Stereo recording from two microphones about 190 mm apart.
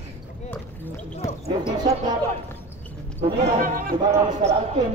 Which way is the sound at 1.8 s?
20° right (ahead or behind).